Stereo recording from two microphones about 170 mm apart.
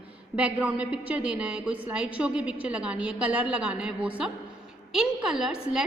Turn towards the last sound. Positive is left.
turn(degrees=-5)  # may be behind; listen again after turning